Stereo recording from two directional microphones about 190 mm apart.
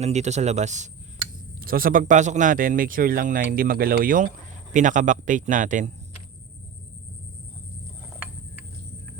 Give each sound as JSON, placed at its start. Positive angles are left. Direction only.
{"t": 0.0, "sound": "speech", "side_deg": -35}
{"t": 1.5, "sound": "a man's voice", "side_deg": -50}